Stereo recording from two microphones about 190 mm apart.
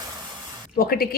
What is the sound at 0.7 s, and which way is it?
Speech, 50° left (ahead or behind).